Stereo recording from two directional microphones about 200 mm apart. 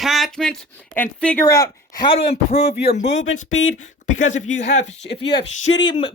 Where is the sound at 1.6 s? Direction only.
20° left (ahead or behind).